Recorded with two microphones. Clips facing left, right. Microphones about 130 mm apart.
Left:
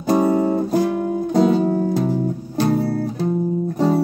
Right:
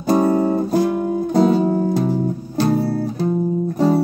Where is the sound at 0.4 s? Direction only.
Centre (ahead or behind).